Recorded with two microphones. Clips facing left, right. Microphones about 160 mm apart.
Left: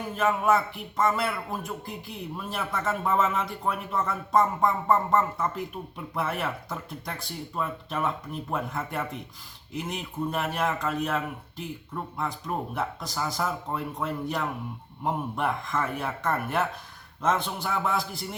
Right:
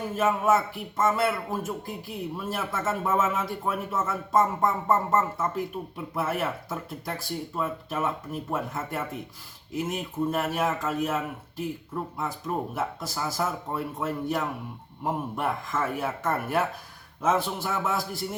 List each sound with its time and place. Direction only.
0.2 s speech: 5° right (ahead or behind)
12.7 s speech: 5° right (ahead or behind)